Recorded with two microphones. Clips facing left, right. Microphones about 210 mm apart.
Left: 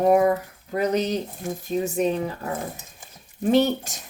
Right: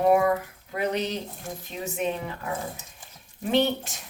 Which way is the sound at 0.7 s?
40° left (ahead or behind).